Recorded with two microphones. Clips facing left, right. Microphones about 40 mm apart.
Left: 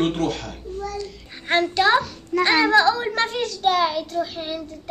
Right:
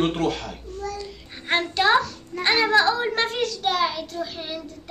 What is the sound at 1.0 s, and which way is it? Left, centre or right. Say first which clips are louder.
Child singing: left 3 dB; centre.